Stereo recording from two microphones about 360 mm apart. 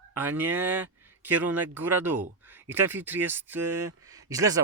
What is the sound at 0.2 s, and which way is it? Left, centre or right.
Speech, centre.